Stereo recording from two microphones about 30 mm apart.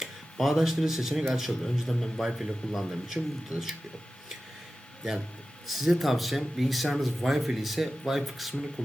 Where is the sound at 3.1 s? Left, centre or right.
Centre.